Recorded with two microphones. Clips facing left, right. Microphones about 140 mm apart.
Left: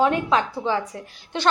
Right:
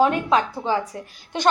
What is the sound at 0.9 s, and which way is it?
Speech, 35° right (ahead or behind).